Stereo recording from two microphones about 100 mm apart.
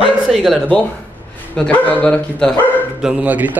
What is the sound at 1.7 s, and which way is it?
Speech, 10° left (ahead or behind).